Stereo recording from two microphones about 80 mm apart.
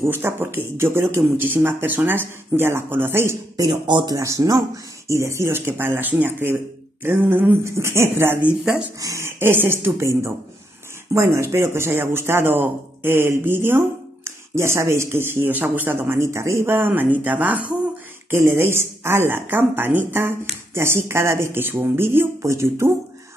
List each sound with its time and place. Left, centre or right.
0.0 s speech: right
3.8 s speech: right
4.1 s speech: right
9.4 s speech: right
18.3 s speech: right